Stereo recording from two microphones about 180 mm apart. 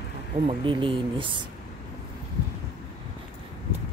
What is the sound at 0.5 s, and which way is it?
Speech, 30° right (ahead or behind).